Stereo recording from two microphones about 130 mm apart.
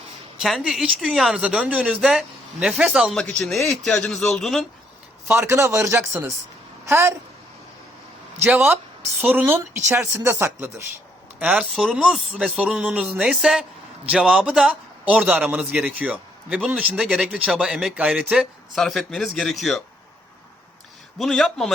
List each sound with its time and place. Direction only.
0.3 s speech: centre (ahead or behind)
3.2 s speech: 5° left (ahead or behind)
5.3 s a man's voice: 20° right (ahead or behind)
8.4 s a man's voice: 15° right (ahead or behind); by 19.8 s centre (ahead or behind)
21.2 s speech: centre (ahead or behind)